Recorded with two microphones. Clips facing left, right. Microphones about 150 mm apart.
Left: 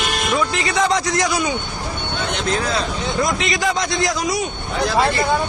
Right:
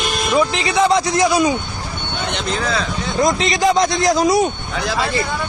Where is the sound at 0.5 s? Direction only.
15° right (ahead or behind).